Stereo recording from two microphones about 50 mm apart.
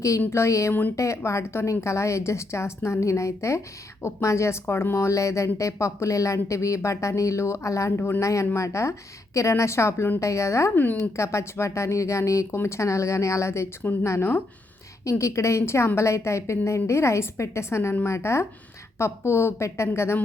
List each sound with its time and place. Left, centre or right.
0.3 s a woman's voice: left
0.7 s speech: left
0.9 s a woman's voice: left
7.9 s speech: left
8.2 s a woman's voice: left
10.2 s speech: left
11.2 s a woman's voice: left
12.5 s a woman's voice: left
15.0 s a woman's voice: left